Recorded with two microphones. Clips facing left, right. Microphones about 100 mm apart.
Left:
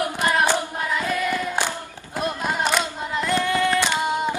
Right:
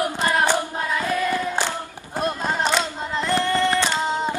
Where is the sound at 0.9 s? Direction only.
15° right (ahead or behind).